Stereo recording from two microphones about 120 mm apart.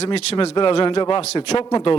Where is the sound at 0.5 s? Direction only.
45° left (ahead or behind).